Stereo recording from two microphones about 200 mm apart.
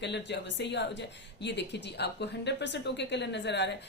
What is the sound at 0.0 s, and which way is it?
A woman's voice, 60° left (ahead or behind).